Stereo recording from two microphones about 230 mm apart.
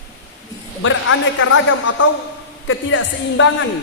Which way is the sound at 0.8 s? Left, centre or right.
Left.